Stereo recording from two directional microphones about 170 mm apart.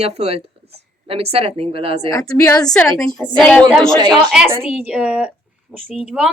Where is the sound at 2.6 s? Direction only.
5° left (ahead or behind).